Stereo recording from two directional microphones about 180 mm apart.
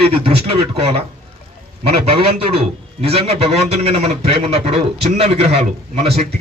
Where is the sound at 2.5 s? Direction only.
35° right (ahead or behind).